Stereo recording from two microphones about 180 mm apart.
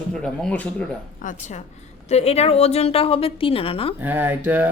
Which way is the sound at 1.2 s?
40° left (ahead or behind).